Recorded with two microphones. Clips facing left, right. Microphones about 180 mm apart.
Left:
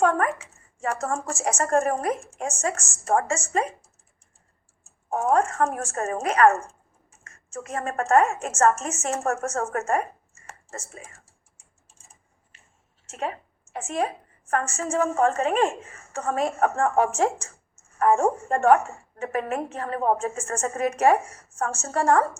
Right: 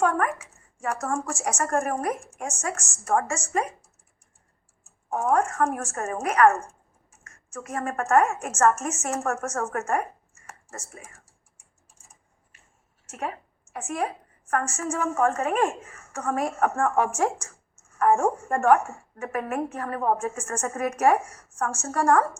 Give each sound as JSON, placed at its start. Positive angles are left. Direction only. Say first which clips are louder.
{"t": 0.0, "sound": "a woman's voice", "louder": "left 2 dB", "side_deg": 25}
{"t": 4.8, "sound": "a woman's voice", "louder": "left 1 dB", "side_deg": 30}